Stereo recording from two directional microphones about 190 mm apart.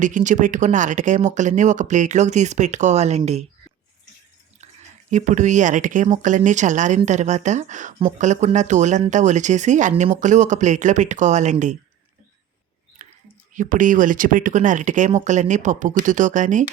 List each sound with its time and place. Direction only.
0.0 s speech: 40° right (ahead or behind)
5.1 s speech: 40° right (ahead or behind)
13.0 s a sound: 40° right (ahead or behind)
13.5 s speech: 45° right (ahead or behind)